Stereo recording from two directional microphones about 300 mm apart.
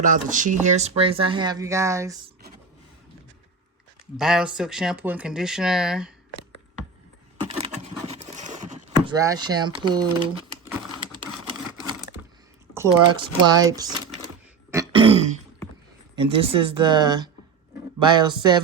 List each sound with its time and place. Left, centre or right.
0.0 s speech: right; by 2.1 s centre
4.2 s speech: centre
7.3 s a sound: centre
9.0 s speech: centre
12.7 s speech: centre
13.7 s a sound: centre
14.7 s throat clearing: centre
16.1 s speech: centre